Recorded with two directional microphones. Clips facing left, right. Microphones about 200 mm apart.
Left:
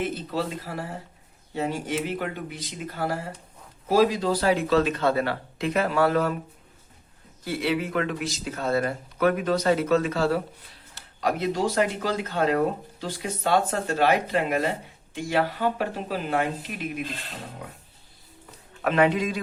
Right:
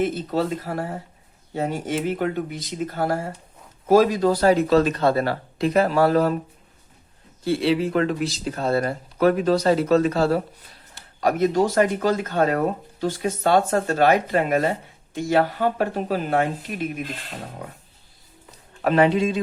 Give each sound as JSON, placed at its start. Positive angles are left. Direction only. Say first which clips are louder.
{"t": 0.0, "sound": "speech", "louder": "right 5 dB", "side_deg": -45}
{"t": 7.4, "sound": "speech", "louder": "right 6 dB", "side_deg": -30}
{"t": 18.8, "sound": "speech", "louder": "right 4 dB", "side_deg": -35}